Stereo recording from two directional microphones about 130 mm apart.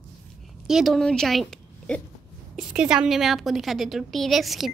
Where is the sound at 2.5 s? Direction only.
5° right (ahead or behind).